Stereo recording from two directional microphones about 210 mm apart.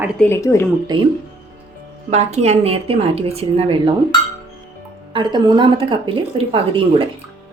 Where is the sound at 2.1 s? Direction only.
30° right (ahead or behind).